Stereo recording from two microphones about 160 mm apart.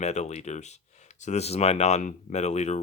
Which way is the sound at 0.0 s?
45° left (ahead or behind).